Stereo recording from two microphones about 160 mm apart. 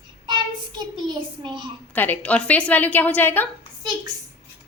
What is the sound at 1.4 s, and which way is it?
Speech, 30° right (ahead or behind).